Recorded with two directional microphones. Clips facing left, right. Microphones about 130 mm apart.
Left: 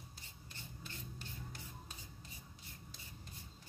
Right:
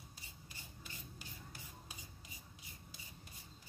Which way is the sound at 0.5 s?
10° right (ahead or behind).